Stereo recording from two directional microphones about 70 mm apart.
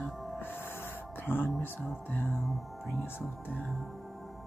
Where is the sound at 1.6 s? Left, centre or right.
Left.